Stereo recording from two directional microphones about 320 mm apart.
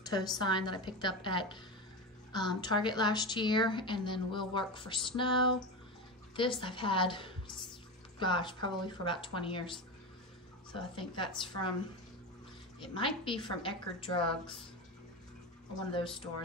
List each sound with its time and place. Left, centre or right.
0.4 s a woman's voice: centre
6.6 s a woman's voice: centre
12.9 s a woman's voice: centre
14.3 s speech: centre
15.9 s a woman's voice: centre